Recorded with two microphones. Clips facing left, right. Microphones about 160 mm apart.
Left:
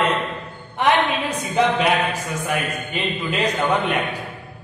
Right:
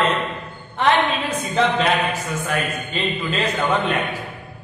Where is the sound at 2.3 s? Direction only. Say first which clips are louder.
Even; 15° left (ahead or behind).